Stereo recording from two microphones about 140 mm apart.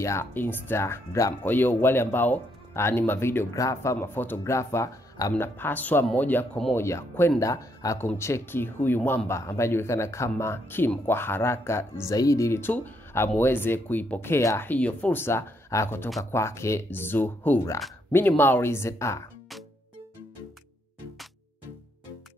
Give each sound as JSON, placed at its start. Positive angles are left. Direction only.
{"t": 0.0, "sound": "speech", "side_deg": 20}